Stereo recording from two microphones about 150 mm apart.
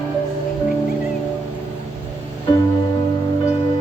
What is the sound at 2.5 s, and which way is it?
Music, 30° left (ahead or behind).